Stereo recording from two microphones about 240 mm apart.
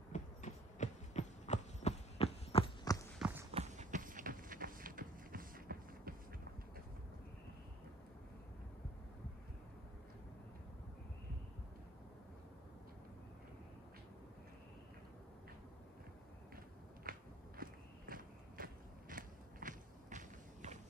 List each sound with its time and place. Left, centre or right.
0.1 s clip-clop: left
3.2 s a sound: centre
3.5 s run: right
17.0 s walk: right